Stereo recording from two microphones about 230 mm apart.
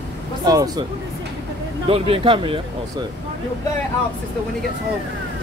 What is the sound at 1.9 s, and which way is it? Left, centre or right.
Speech, right.